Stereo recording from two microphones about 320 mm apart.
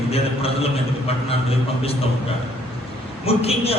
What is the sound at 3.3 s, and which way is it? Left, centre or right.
Speech, centre.